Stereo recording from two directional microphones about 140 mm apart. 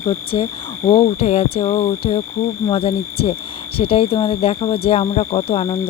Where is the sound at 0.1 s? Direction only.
40° left (ahead or behind).